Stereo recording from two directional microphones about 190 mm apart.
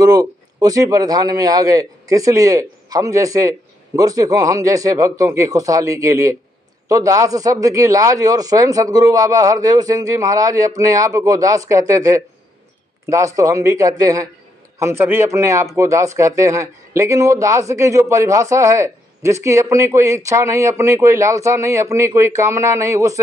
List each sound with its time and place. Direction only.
0.0 s speech: 20° right (ahead or behind)